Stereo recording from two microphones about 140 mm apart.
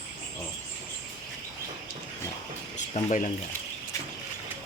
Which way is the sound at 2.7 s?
60° left (ahead or behind).